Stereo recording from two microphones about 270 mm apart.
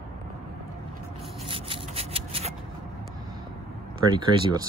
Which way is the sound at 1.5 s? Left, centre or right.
Centre.